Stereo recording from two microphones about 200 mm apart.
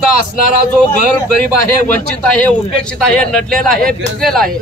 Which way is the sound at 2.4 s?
5° left (ahead or behind).